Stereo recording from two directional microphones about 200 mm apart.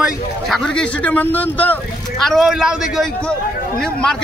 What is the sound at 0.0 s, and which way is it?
A man's voice, 5° left (ahead or behind).